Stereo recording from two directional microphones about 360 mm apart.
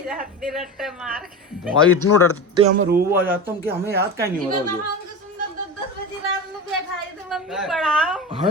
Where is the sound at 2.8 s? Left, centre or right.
Right.